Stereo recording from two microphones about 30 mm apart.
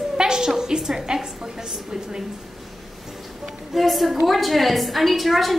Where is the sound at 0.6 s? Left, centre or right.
Right.